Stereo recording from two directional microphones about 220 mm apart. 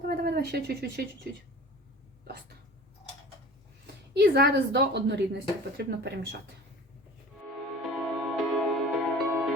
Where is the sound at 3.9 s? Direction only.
45° right (ahead or behind).